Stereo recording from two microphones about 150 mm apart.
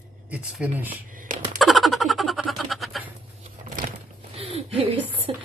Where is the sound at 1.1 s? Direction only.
60° right (ahead or behind).